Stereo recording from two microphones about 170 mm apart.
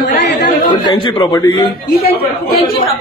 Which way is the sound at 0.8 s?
30° left (ahead or behind).